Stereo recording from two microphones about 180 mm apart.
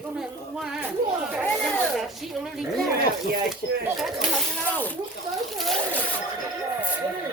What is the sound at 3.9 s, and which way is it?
Speech, centre (ahead or behind).